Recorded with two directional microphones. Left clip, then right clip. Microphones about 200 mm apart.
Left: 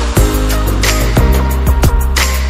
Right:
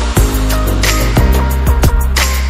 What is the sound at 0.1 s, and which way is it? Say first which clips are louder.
Music: left 2 dB; centre (ahead or behind).